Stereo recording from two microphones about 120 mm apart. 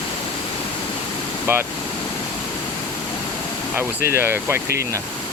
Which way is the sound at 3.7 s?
20° right (ahead or behind).